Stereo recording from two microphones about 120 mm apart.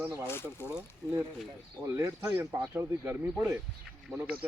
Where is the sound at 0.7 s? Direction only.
5° right (ahead or behind).